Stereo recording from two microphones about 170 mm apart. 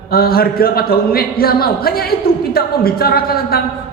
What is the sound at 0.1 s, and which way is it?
Speech, 60° left (ahead or behind).